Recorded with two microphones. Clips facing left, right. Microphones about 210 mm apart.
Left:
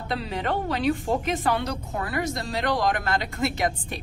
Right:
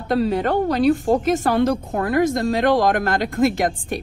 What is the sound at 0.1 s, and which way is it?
A woman's voice, 45° right (ahead or behind).